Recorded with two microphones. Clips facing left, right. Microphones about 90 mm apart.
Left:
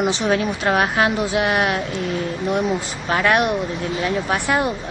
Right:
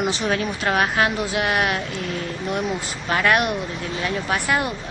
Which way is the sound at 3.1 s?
15° left (ahead or behind).